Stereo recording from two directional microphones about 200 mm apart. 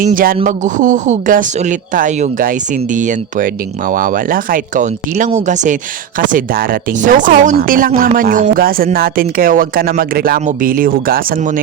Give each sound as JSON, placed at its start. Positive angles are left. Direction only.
{"t": 0.0, "sound": "speech", "side_deg": -45}